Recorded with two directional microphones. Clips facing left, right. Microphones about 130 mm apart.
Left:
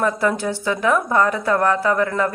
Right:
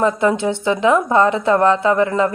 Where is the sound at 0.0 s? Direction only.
20° right (ahead or behind).